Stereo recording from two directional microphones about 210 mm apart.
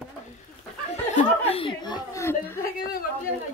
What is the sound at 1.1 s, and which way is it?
Chuckle, 25° left (ahead or behind).